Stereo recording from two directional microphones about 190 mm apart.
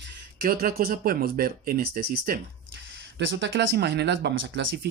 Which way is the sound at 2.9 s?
75° right (ahead or behind).